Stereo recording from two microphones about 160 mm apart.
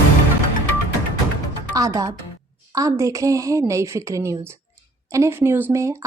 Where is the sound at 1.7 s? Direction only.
20° right (ahead or behind).